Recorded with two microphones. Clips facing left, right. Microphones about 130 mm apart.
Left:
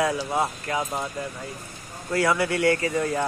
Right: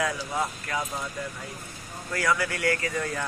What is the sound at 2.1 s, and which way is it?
Speech, 25° left (ahead or behind).